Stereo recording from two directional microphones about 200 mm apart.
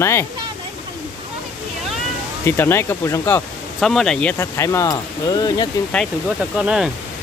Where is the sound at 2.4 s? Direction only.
10° left (ahead or behind).